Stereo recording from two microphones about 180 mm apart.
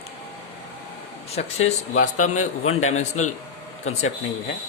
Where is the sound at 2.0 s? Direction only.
40° left (ahead or behind).